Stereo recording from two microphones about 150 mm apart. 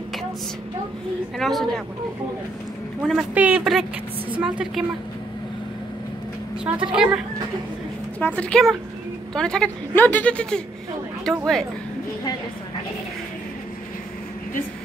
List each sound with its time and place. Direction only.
1.4 s speech: centre (ahead or behind)
3.0 s speech: 5° right (ahead or behind)
6.6 s a woman's voice: 5° right (ahead or behind)
8.2 s speech: 10° left (ahead or behind)